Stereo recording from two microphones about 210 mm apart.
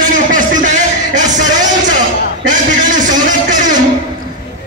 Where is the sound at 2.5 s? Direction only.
40° right (ahead or behind).